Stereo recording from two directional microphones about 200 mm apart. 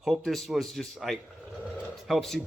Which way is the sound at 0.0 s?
Centre (ahead or behind).